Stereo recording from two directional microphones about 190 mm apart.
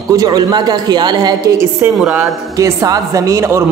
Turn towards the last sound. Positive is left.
turn(degrees=-15)  # may be behind; listen again after turning